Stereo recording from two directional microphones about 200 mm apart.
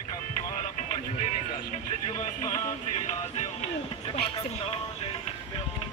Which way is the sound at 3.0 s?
35° left (ahead or behind).